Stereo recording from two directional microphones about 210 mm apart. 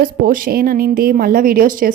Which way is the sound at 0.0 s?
40° right (ahead or behind).